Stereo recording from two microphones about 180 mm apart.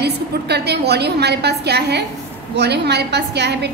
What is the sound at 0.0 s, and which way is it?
A woman's voice, 65° right (ahead or behind).